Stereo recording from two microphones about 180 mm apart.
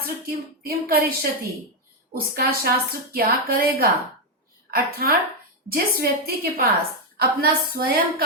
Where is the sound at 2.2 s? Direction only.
55° right (ahead or behind).